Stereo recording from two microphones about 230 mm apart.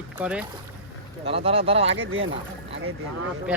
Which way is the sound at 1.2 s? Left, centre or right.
Right.